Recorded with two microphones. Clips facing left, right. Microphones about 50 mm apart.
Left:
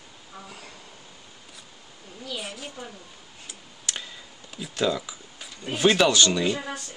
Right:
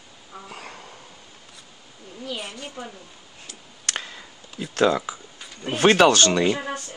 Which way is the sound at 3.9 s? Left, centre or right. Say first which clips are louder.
Right 4 dB; right.